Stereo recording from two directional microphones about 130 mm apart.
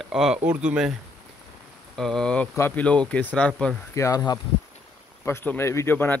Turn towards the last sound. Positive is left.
turn(degrees=15)  # may be behind; listen again after turning